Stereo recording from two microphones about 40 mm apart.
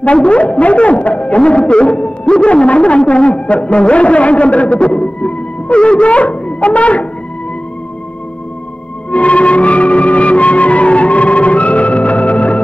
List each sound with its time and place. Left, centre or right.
0.0 s a man's voice: left
9.1 s music: left